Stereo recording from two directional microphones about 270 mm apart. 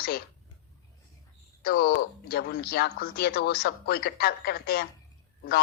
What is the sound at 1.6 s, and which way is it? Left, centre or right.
Speech, left.